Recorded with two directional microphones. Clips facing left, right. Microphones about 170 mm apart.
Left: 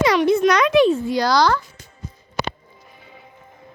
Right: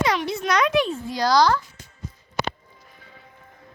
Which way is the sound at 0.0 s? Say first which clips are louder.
Left 6 dB; 75° left (ahead or behind).